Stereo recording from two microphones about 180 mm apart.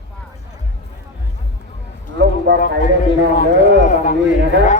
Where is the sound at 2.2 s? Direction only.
70° right (ahead or behind).